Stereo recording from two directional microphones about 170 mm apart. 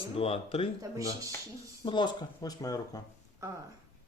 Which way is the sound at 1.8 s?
25° left (ahead or behind).